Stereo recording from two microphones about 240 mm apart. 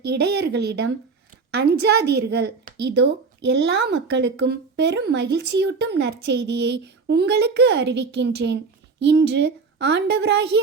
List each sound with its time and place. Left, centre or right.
0.0 s a woman's voice: right